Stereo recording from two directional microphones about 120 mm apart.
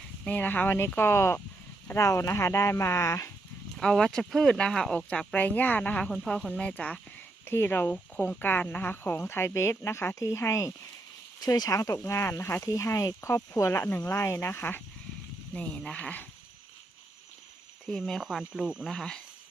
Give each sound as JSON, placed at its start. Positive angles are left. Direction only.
{"t": 0.3, "sound": "speech", "side_deg": 15}
{"t": 3.8, "sound": "speech", "side_deg": 5}
{"t": 17.8, "sound": "speech", "side_deg": 0}
{"t": 18.9, "sound": "speech", "side_deg": 5}